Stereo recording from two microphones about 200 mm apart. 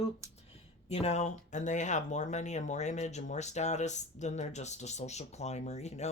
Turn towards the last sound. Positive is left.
turn(degrees=35)  # may be behind; listen again after turning